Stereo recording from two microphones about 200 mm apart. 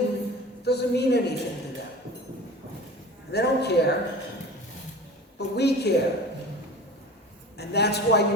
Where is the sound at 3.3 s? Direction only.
55° left (ahead or behind).